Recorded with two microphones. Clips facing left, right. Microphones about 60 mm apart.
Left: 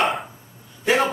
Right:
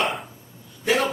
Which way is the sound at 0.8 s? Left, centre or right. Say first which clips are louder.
Left 2 dB; centre.